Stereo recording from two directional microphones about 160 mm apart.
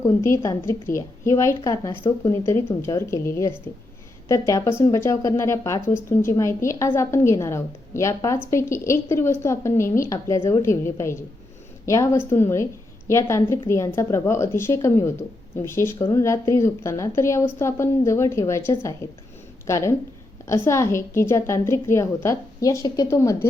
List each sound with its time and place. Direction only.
0.0 s a woman's voice: 20° left (ahead or behind)
2.4 s a woman's voice: 15° left (ahead or behind)